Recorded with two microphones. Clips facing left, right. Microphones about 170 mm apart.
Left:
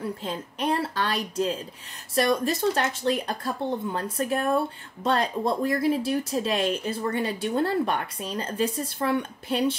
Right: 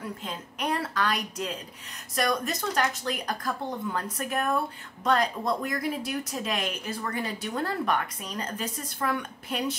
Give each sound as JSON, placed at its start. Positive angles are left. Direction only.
{"t": 0.0, "sound": "a woman's voice", "side_deg": 30}